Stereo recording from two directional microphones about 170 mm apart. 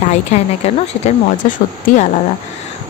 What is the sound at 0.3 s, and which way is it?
Speech, 40° left (ahead or behind).